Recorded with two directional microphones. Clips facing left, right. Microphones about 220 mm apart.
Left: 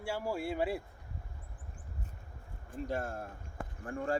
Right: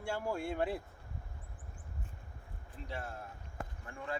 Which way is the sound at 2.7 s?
45° left (ahead or behind).